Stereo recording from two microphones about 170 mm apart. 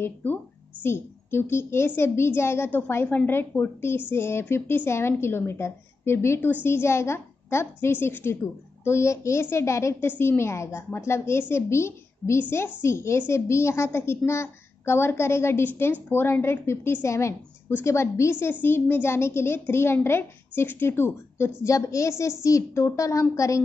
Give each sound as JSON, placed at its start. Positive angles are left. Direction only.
{"t": 0.0, "sound": "a woman's voice", "side_deg": 10}